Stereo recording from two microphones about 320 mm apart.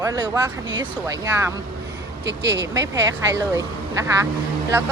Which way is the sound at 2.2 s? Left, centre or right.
Right.